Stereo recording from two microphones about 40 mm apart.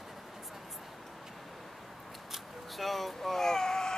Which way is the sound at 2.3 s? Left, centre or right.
Centre.